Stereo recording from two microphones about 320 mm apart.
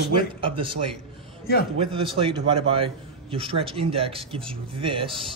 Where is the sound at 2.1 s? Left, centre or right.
Centre.